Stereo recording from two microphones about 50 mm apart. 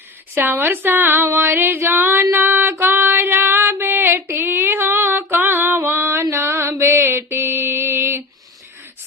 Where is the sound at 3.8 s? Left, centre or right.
Right.